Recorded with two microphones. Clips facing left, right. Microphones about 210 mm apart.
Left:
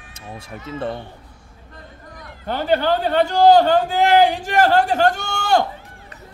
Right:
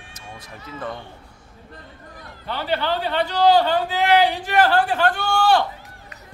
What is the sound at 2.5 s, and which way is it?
A man's voice, 45° left (ahead or behind).